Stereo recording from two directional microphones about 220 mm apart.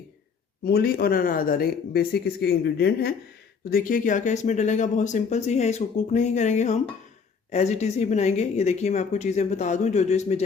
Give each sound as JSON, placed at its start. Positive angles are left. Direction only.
{"t": 0.6, "sound": "speech", "side_deg": 45}